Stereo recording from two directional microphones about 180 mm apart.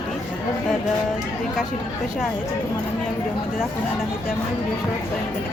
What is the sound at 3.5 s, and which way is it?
Speech, centre (ahead or behind).